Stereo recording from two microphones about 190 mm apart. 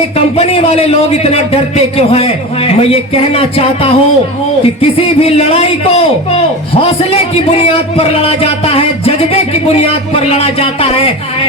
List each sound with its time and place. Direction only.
0.3 s a man's voice: 35° left (ahead or behind)